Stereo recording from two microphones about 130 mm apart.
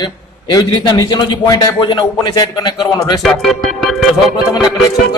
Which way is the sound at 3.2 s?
Centre (ahead or behind).